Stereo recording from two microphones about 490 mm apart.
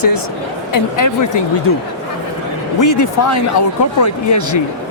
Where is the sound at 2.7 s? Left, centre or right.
Left.